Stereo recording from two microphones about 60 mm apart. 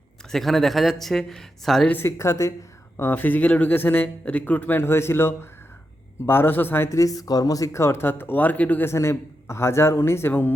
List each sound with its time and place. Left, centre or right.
0.3 s speech: centre
2.0 s a man's voice: left
3.0 s speech: left
4.8 s a man's voice: left
6.9 s speech: left
7.7 s a man's voice: left
8.0 s speech: left
8.8 s a man's voice: left